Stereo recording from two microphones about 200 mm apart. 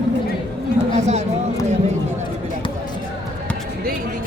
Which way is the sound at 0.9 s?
35° right (ahead or behind).